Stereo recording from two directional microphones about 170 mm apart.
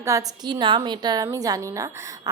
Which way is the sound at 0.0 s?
20° right (ahead or behind).